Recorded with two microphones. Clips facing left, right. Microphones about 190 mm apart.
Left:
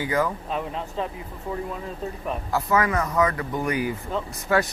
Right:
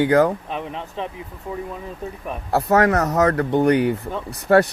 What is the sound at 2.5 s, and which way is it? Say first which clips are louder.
Speech: right 6 dB; 70° right (ahead or behind).